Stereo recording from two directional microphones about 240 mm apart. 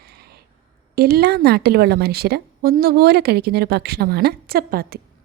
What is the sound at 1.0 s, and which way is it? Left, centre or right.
A woman's voice, right.